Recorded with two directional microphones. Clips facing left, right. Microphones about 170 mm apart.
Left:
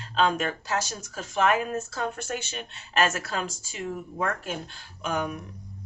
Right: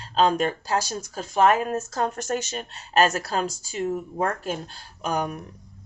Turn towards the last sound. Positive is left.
turn(degrees=-40)  # may be behind; listen again after turning